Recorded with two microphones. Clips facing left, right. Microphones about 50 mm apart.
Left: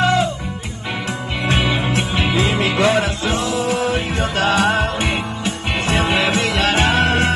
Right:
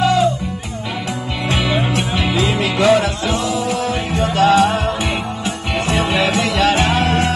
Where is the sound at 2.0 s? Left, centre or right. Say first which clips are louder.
Right 1 dB; left.